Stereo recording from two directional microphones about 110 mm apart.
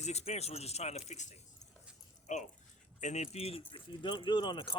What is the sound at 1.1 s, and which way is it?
Speech, 90° left.